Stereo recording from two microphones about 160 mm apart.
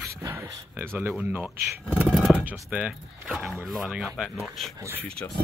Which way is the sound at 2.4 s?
10° right (ahead or behind).